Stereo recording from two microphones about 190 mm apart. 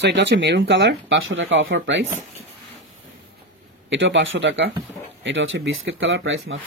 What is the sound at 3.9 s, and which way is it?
Speech, 75° right (ahead or behind).